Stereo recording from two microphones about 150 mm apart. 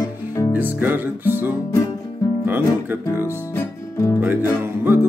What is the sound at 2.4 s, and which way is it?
Speech, 15° right (ahead or behind).